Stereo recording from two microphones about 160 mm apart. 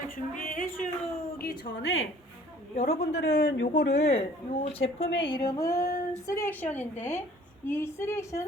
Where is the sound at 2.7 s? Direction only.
40° left (ahead or behind).